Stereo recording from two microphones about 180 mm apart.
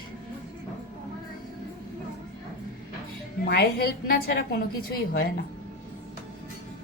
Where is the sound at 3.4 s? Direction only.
60° left (ahead or behind).